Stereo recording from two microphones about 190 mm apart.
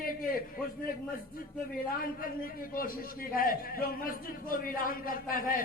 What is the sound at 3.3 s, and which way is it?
A man's voice, 50° left (ahead or behind).